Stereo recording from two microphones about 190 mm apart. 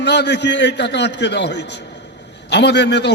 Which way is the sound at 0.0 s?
60° left (ahead or behind).